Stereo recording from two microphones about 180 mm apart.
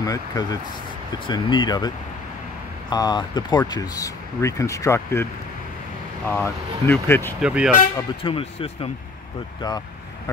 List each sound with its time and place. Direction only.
0.0 s speech: 20° left (ahead or behind)
2.9 s speech: 25° left (ahead or behind)
7.4 s speech: 5° right (ahead or behind)
8.2 s speech: 30° left (ahead or behind)
9.6 s vehicle: 20° left (ahead or behind)